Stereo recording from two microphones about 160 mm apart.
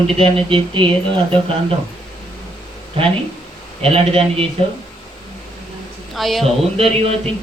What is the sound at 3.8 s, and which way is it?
Speech, 35° right (ahead or behind).